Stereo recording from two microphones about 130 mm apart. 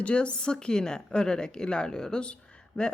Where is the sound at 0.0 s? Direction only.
10° left (ahead or behind).